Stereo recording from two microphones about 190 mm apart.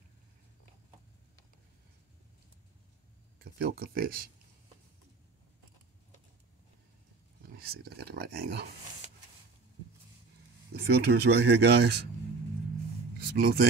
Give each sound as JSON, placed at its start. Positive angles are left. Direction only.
{"t": 3.5, "sound": "speech", "side_deg": -50}
{"t": 7.4, "sound": "speech", "side_deg": -55}
{"t": 10.7, "sound": "speech", "side_deg": -60}
{"t": 13.2, "sound": "a sound", "side_deg": -55}